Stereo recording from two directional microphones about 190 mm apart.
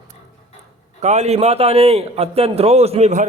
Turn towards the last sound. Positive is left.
turn(degrees=-35)  # may be behind; listen again after turning